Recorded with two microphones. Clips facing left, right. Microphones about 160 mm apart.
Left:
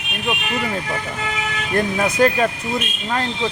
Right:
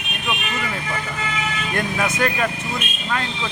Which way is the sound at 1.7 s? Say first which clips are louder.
Left 5 dB; 35° left (ahead or behind).